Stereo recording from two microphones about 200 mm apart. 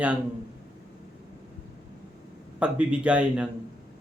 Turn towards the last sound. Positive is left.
turn(degrees=-5)  # may be behind; listen again after turning